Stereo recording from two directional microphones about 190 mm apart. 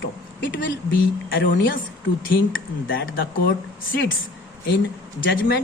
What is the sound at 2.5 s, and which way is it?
Speech, 90° left.